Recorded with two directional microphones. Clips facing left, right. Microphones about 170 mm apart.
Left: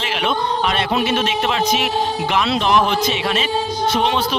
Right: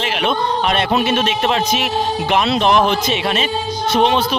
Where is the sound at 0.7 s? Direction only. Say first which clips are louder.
Right 2 dB; 60° right (ahead or behind).